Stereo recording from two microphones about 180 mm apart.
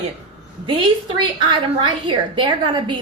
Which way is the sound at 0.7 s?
25° right (ahead or behind).